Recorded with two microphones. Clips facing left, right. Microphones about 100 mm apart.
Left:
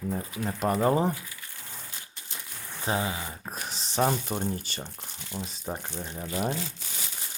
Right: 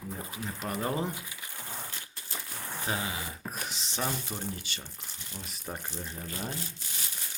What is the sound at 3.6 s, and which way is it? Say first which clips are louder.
Speech: left 10 dB; 40° left (ahead or behind).